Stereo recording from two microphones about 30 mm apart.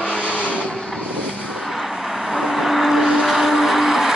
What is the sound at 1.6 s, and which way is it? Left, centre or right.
Vehicle, centre.